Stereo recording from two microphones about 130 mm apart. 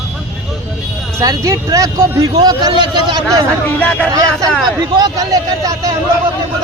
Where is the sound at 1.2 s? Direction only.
25° right (ahead or behind).